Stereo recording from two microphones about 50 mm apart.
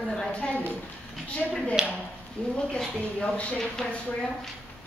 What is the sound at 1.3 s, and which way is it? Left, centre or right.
A woman's voice, left.